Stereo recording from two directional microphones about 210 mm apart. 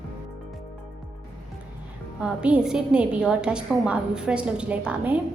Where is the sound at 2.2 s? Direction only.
5° right (ahead or behind).